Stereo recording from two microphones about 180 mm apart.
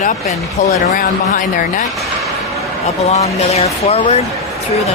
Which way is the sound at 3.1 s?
35° left (ahead or behind).